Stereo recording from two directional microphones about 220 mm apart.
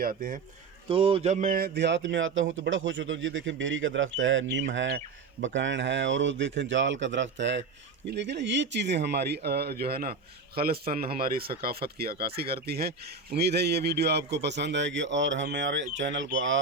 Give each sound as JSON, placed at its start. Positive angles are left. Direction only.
{"t": 0.0, "sound": "speech", "side_deg": -40}
{"t": 0.9, "sound": "speech", "side_deg": -25}